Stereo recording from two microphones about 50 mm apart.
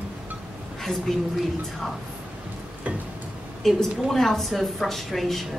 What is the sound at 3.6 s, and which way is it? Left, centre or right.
A woman's voice, centre.